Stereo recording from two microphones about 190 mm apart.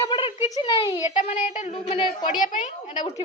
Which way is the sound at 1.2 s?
40° left (ahead or behind).